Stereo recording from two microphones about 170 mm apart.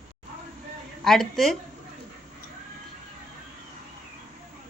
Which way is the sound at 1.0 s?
Centre (ahead or behind).